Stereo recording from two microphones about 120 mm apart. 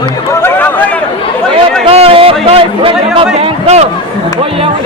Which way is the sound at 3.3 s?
65° right (ahead or behind).